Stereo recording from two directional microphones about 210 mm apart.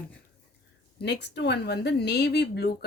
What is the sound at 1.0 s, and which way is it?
Speech, 55° left (ahead or behind).